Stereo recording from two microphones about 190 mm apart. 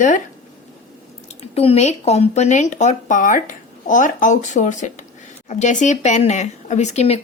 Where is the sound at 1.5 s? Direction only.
35° left (ahead or behind).